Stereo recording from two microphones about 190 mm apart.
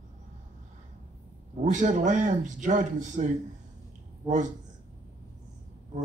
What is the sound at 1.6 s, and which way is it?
Speech, 40° right (ahead or behind).